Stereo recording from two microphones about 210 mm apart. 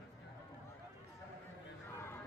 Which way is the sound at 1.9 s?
10° left (ahead or behind).